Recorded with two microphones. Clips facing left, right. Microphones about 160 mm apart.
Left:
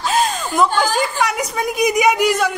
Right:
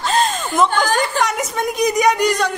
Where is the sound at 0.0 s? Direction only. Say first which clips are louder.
Even; centre (ahead or behind).